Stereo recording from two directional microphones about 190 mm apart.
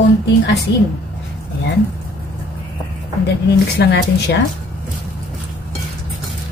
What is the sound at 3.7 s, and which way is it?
Speech, 60° left (ahead or behind).